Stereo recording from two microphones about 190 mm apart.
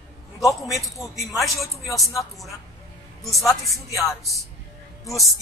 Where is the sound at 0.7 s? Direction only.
Centre (ahead or behind).